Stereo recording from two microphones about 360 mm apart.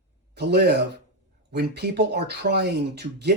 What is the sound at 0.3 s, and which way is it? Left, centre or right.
Speech, right.